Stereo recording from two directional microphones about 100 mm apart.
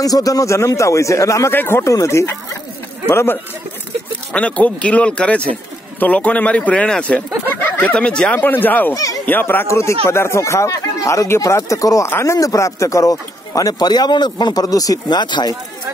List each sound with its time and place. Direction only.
0.0 s speech: 35° left (ahead or behind)
4.3 s a man's voice: 10° left (ahead or behind)
8.9 s speech: 35° left (ahead or behind)
9.2 s speech: 20° left (ahead or behind); by 15.5 s 45° left (ahead or behind)